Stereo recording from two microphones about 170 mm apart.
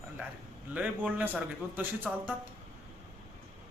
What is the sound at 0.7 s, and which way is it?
Speech, 10° right (ahead or behind).